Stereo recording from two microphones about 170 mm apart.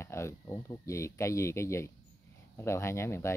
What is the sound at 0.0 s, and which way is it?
Speech, 15° left (ahead or behind).